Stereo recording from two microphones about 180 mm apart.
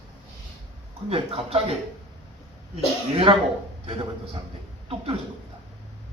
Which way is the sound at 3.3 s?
30° right (ahead or behind).